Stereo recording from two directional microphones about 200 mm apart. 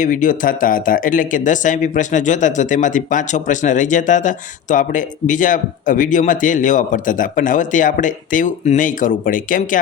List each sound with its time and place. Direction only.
0.0 s speech: 40° left (ahead or behind)